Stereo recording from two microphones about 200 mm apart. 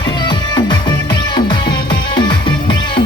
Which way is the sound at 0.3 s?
20° left (ahead or behind).